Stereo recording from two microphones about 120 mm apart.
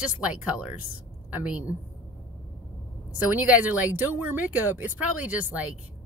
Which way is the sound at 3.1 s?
15° right (ahead or behind).